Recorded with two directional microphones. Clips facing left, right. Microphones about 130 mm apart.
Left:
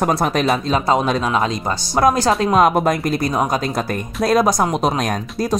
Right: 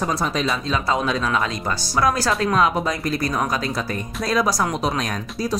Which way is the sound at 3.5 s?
45° left (ahead or behind).